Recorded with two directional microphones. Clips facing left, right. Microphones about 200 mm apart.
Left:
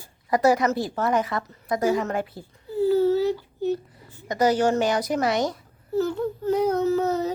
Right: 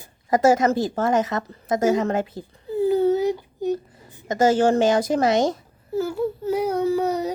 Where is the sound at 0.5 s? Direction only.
40° right (ahead or behind).